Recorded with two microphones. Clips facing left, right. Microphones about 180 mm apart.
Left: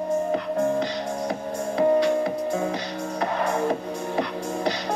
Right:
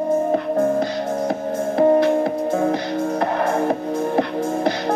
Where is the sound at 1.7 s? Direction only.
60° right (ahead or behind).